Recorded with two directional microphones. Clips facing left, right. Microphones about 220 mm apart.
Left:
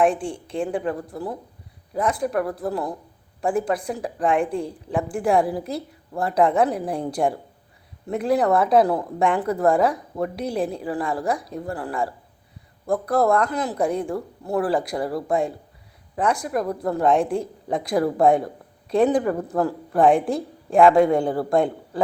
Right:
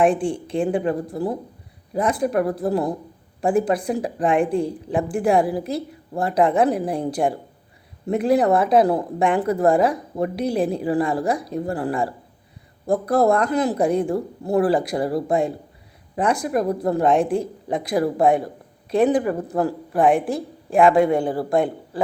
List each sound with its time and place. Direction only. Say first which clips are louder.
0.0 s a woman's voice: right 2 dB; 20° right (ahead or behind)
8.1 s a woman's voice: right 2 dB; 20° right (ahead or behind)
20.1 s a woman's voice: even; 5° right (ahead or behind)